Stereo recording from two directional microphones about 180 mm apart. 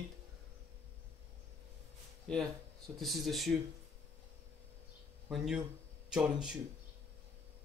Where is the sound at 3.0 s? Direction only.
Centre (ahead or behind).